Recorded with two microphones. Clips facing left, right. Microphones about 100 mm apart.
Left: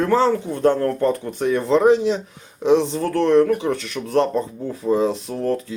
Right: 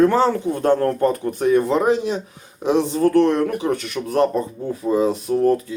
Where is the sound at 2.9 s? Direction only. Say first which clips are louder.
Right 1 dB; 45° right (ahead or behind).